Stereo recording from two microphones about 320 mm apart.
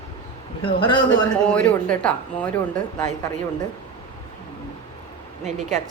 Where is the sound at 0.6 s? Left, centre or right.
Centre.